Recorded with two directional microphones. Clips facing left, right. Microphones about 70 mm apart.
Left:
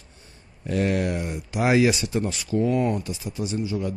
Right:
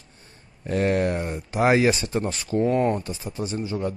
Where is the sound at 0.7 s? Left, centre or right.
Right.